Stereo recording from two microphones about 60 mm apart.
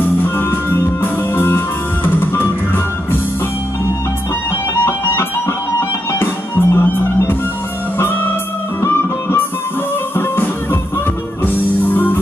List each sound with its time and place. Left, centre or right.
0.0 s music: left
4.8 s music: left
8.8 s music: left